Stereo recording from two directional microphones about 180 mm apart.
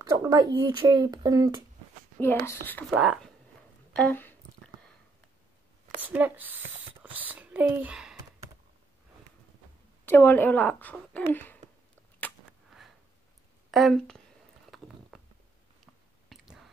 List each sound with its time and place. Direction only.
0.0 s speech: 20° right (ahead or behind)
2.1 s speech: 15° left (ahead or behind)
3.0 s speech: 5° right (ahead or behind)
3.9 s speech: 10° left (ahead or behind)
5.9 s speech: 10° right (ahead or behind)
10.0 s speech: 10° left (ahead or behind)
13.7 s speech: centre (ahead or behind)
14.7 s a sound: centre (ahead or behind)
16.3 s whispering: centre (ahead or behind)